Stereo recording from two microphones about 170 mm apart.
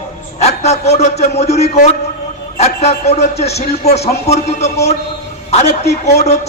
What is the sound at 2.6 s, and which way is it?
A man's voice, 40° left (ahead or behind).